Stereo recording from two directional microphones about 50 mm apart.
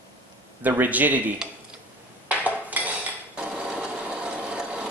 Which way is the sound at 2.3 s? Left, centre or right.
Right.